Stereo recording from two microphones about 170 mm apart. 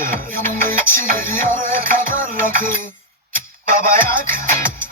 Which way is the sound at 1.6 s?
55° right (ahead or behind).